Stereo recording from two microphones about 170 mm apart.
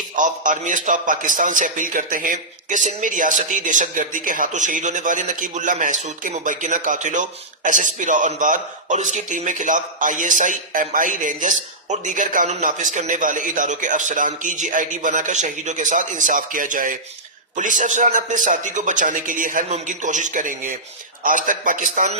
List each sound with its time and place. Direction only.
0.2 s a man's voice: 50° right (ahead or behind)